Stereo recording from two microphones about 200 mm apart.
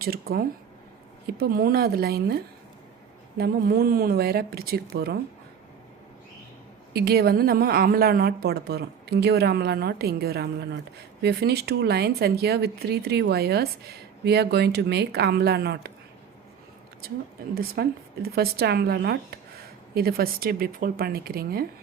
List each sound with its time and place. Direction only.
0.0 s a woman's voice: 50° right (ahead or behind)
6.9 s a woman's voice: 50° right (ahead or behind)
17.5 s a woman's voice: 50° right (ahead or behind)